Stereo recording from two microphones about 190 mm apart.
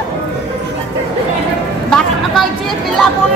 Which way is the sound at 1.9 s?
5° left (ahead or behind).